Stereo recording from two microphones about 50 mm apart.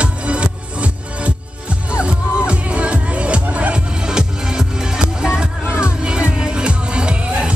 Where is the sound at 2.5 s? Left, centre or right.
Right.